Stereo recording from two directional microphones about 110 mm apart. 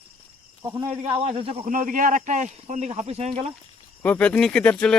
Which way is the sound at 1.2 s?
65° right (ahead or behind).